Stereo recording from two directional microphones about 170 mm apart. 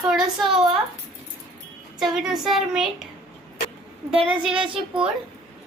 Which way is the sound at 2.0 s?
Centre (ahead or behind).